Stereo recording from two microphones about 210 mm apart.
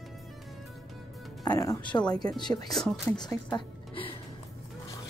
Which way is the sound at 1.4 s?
15° left (ahead or behind).